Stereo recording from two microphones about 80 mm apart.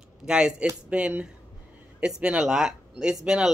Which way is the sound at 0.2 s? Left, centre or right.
Centre.